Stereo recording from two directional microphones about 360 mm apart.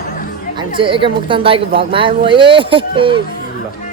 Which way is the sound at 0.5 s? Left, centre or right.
Centre.